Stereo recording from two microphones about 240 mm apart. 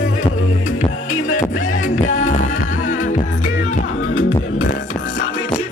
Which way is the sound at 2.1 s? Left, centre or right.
Left.